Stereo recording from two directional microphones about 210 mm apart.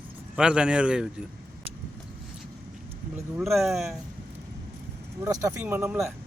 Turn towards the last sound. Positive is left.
turn(degrees=-10)  # may be behind; listen again after turning